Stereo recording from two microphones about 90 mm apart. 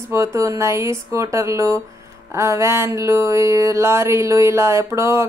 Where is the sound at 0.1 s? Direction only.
35° right (ahead or behind).